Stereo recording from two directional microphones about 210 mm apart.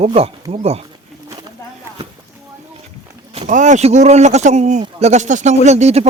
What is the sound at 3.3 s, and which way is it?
Speech, 35° right (ahead or behind).